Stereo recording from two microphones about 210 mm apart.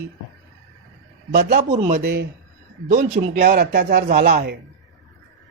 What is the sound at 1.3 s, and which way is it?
Speech, 35° right (ahead or behind).